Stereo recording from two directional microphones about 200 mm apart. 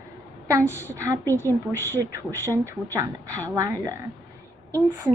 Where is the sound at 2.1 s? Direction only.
15° right (ahead or behind).